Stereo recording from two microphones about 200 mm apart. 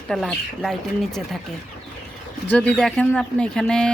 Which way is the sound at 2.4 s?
5° left (ahead or behind).